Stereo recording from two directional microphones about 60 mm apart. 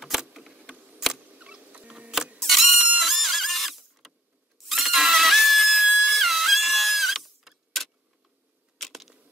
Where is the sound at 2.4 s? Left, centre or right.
Centre.